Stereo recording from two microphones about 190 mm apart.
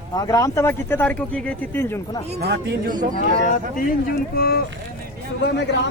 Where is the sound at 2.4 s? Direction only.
60° right (ahead or behind).